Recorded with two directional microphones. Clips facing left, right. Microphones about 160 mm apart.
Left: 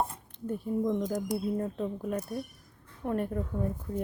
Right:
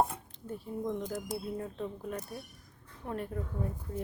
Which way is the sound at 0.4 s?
50° left (ahead or behind).